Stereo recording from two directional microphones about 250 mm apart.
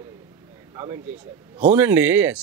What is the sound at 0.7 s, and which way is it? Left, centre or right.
Speech, centre.